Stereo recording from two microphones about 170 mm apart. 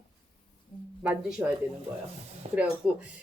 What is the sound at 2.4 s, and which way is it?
Speech, 35° right (ahead or behind).